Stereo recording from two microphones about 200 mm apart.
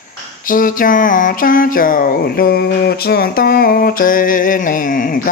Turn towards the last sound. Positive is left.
turn(degrees=45)  # may be behind; listen again after turning